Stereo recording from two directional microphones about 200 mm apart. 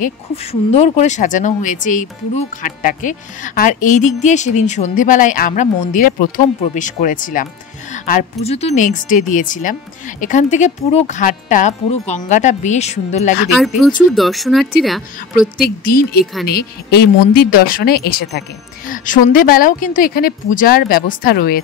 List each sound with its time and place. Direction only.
0.0 s speech: 30° left (ahead or behind)
13.5 s speech: centre (ahead or behind)
15.6 s a woman's voice: 45° left (ahead or behind)